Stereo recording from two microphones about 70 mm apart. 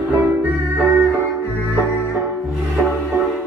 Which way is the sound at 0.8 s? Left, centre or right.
Right.